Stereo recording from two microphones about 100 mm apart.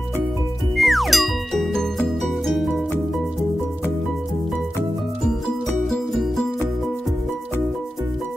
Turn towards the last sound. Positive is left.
turn(degrees=0)  # may be behind; listen again after turning